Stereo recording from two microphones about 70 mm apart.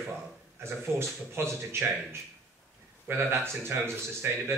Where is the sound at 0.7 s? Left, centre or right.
Right.